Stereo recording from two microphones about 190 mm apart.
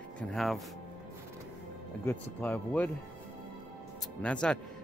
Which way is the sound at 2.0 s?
10° left (ahead or behind).